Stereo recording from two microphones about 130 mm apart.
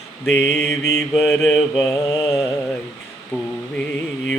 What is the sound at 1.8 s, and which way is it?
Mantra, 20° left (ahead or behind).